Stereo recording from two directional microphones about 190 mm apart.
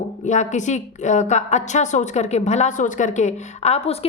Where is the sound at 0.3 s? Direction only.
40° left (ahead or behind).